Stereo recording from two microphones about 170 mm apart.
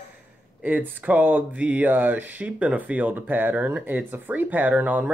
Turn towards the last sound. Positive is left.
turn(degrees=-10)  # may be behind; listen again after turning